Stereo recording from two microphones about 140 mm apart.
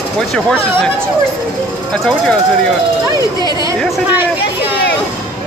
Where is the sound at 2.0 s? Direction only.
5° left (ahead or behind).